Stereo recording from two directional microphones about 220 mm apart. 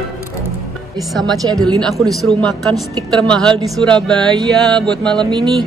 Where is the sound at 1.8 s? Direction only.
Centre (ahead or behind).